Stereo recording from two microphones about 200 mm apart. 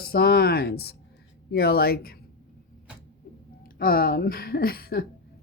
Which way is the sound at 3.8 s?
45° left (ahead or behind).